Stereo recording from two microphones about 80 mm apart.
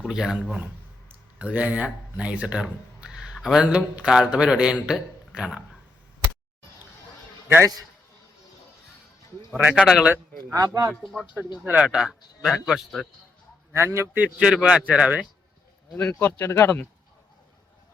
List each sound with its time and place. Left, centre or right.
0.0 s speech: centre
9.6 s speech: centre
11.6 s speech: centre
13.7 s a man's voice: right
14.2 s speech: centre
16.0 s speech: centre
16.2 s speech: left